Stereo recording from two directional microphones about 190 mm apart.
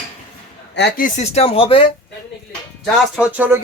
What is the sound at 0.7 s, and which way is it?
Speech, 60° left (ahead or behind).